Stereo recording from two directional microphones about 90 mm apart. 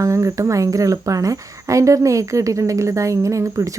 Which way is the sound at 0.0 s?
35° right (ahead or behind).